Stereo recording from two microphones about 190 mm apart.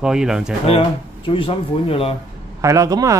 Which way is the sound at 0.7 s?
30° left (ahead or behind).